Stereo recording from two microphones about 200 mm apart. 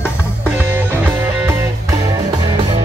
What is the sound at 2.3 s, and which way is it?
Music, 20° right (ahead or behind).